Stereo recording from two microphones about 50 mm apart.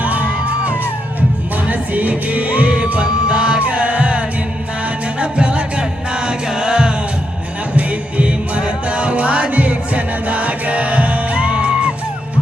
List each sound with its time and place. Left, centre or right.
0.0 s music: right
5.2 s music: right